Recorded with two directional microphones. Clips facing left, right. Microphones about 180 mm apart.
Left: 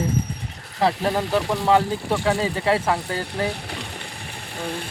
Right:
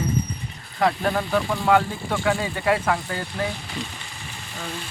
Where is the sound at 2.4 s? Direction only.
30° left (ahead or behind).